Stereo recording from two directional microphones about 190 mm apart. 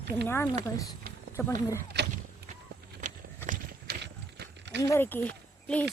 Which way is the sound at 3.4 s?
45° right (ahead or behind).